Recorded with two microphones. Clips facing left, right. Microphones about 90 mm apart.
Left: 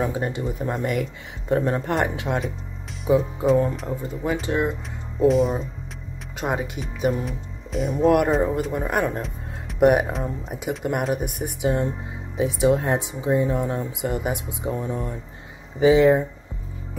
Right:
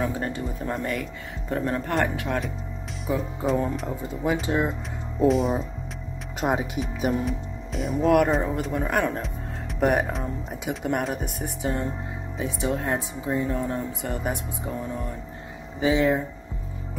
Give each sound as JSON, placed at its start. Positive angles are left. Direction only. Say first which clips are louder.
{"t": 0.0, "sound": "speech", "louder": "left 3 dB", "side_deg": 15}
{"t": 3.4, "sound": "speech", "louder": "left 2 dB", "side_deg": 0}
{"t": 5.3, "sound": "speech", "louder": "left 2 dB", "side_deg": 0}
{"t": 11.2, "sound": "speech", "louder": "left 3 dB", "side_deg": 60}
{"t": 12.4, "sound": "speech", "louder": "left 8 dB", "side_deg": 20}
{"t": 15.8, "sound": "speech", "louder": "left 6 dB", "side_deg": 25}